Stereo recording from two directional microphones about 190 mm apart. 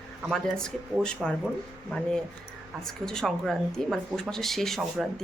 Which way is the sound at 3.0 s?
5° left (ahead or behind).